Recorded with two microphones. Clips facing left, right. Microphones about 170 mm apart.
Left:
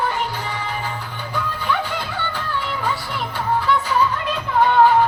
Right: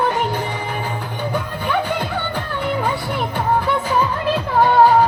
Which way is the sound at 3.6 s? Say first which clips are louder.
Right 1 dB; 50° right (ahead or behind).